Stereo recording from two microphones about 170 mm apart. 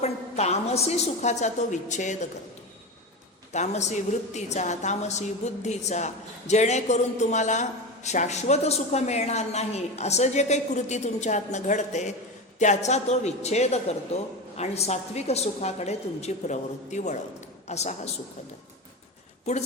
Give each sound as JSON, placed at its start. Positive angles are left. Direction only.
{"t": 0.0, "sound": "a woman's voice", "side_deg": 40}
{"t": 3.5, "sound": "a woman's voice", "side_deg": 40}